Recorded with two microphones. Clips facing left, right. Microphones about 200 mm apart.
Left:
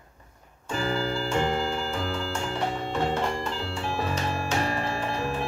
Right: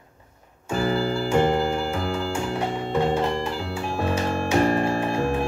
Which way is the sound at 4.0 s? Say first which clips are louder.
Right 7 dB; 55° right (ahead or behind).